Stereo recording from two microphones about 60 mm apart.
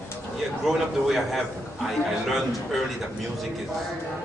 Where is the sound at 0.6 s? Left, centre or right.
Centre.